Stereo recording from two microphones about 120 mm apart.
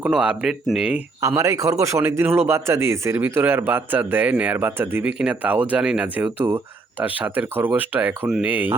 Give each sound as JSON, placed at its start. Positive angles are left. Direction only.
{"t": 0.0, "sound": "a man's voice", "side_deg": -10}
{"t": 1.4, "sound": "a man's voice", "side_deg": -25}